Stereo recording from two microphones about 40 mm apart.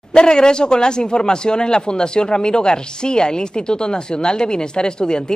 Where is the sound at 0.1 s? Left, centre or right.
Left.